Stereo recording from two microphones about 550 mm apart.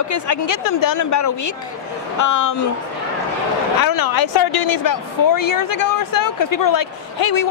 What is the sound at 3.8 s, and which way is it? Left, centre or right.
A woman's voice, left.